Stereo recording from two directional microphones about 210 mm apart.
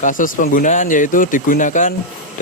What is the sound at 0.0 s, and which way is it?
Speech, 40° left (ahead or behind).